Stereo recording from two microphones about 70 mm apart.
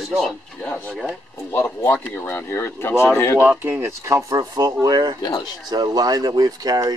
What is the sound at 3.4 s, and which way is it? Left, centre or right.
Speech, right.